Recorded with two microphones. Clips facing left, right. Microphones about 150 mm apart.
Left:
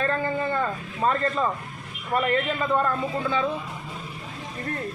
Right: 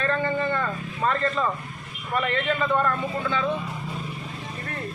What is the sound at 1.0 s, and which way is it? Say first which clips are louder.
A man's voice: left 1 dB; 30° left (ahead or behind).